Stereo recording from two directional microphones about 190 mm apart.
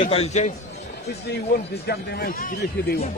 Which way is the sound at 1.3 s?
60° left (ahead or behind).